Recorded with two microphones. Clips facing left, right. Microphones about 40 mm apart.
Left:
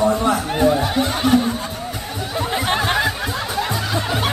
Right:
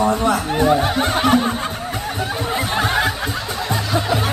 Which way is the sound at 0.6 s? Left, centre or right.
Right.